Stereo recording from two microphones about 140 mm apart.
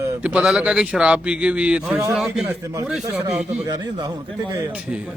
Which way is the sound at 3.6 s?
30° right (ahead or behind).